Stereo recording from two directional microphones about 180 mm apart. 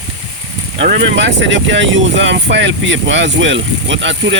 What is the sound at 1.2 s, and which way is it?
Speech, 80° right.